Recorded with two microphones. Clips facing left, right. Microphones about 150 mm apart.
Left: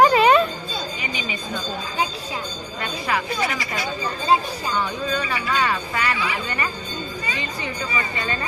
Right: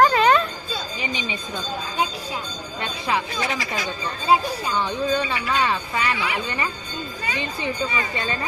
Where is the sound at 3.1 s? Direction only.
25° right (ahead or behind).